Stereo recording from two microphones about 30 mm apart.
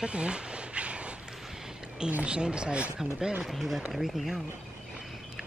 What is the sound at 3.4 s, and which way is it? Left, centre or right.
Speech, centre.